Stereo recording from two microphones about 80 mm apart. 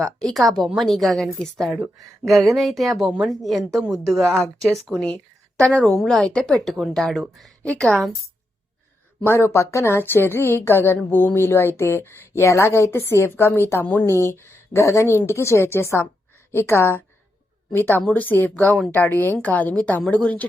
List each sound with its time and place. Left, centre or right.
0.0 s a woman's voice: centre
7.6 s a woman's voice: centre
9.2 s a woman's voice: left; by 20.5 s centre